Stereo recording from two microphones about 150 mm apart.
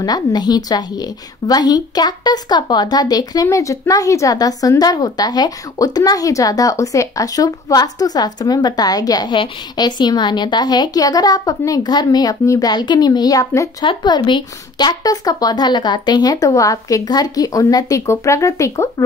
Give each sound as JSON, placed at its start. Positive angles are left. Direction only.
{"t": 0.0, "sound": "a woman's voice", "side_deg": 25}
{"t": 13.8, "sound": "a woman's voice", "side_deg": 30}